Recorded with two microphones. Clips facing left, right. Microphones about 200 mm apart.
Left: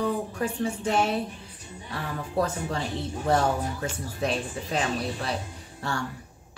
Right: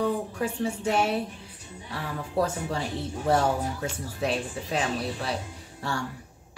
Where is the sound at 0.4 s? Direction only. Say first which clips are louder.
Even; 5° right (ahead or behind).